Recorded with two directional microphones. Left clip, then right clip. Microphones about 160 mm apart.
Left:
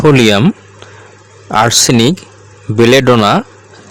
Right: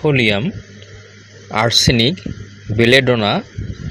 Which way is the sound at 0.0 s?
50° left (ahead or behind).